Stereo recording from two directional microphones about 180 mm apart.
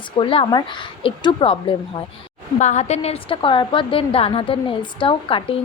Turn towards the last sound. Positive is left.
turn(degrees=30)  # may be behind; listen again after turning